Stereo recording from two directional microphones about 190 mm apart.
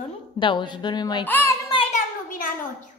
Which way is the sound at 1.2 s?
10° left (ahead or behind).